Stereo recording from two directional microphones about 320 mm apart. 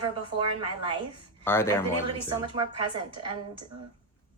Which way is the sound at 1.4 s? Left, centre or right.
Centre.